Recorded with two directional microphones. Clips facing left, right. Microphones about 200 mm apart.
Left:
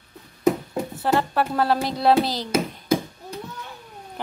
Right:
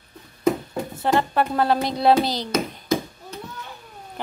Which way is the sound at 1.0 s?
5° left (ahead or behind).